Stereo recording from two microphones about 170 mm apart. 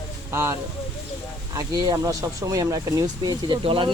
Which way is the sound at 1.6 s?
20° right (ahead or behind).